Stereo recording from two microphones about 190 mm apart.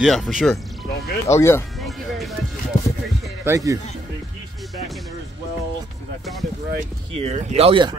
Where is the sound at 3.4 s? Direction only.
15° right (ahead or behind).